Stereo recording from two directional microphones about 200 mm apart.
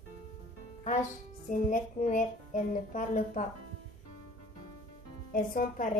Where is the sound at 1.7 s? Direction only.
40° left (ahead or behind).